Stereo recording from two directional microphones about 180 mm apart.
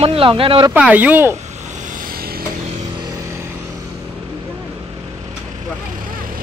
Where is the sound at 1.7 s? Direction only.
45° right (ahead or behind).